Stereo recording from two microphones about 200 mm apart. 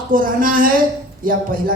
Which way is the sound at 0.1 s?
45° right (ahead or behind).